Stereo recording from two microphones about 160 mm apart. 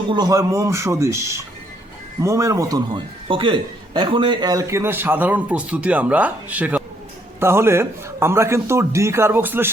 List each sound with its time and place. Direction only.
0.1 s a man's voice: 25° right (ahead or behind)